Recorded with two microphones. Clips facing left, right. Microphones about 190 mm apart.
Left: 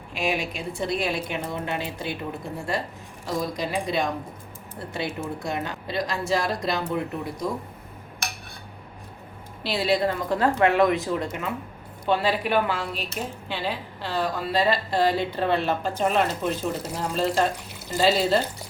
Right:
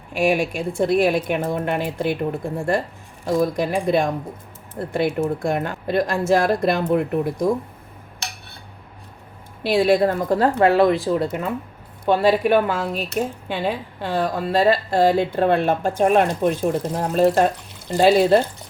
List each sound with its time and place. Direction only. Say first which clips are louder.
0.1 s a woman's voice: right 8 dB; 50° right (ahead or behind)
9.6 s speech: right 7 dB; 50° right (ahead or behind); by 11.5 s 35° right (ahead or behind)
12.0 s a woman's voice: right 7 dB; 45° right (ahead or behind)